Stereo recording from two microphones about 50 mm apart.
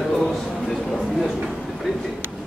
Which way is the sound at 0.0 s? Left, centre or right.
Centre.